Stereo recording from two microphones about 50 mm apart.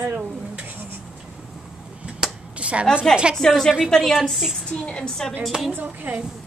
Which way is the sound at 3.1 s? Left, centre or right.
Centre.